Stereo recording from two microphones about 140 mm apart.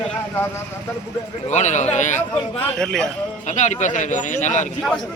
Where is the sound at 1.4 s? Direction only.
60° left (ahead or behind).